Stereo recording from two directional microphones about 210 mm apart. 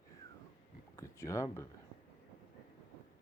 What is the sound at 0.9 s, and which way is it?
Speech, 15° left (ahead or behind).